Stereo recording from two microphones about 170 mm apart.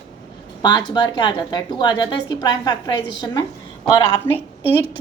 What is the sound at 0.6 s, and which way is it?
A woman's voice, 25° left (ahead or behind).